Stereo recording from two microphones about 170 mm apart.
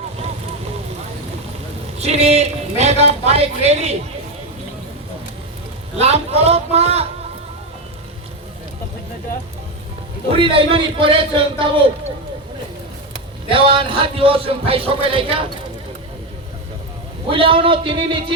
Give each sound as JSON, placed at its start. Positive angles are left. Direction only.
{"t": 2.0, "sound": "speech", "side_deg": -40}
{"t": 6.0, "sound": "speech", "side_deg": -35}
{"t": 10.3, "sound": "speech", "side_deg": -30}
{"t": 13.5, "sound": "speech", "side_deg": -30}
{"t": 17.2, "sound": "speech", "side_deg": -30}